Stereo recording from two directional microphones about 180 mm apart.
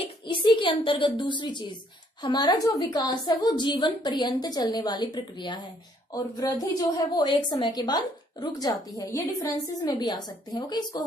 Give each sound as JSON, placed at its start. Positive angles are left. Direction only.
{"t": 0.0, "sound": "a woman's voice", "side_deg": 25}